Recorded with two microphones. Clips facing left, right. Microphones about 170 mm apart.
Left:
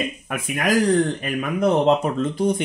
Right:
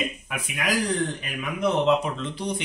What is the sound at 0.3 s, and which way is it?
Speech, 50° left (ahead or behind).